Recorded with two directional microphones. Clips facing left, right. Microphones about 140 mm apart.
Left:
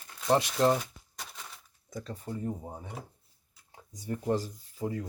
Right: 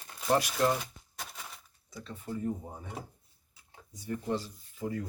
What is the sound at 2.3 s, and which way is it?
Speech, 40° left (ahead or behind).